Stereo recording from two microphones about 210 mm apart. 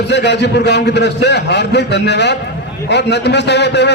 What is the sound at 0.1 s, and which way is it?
A man's voice, 55° left (ahead or behind).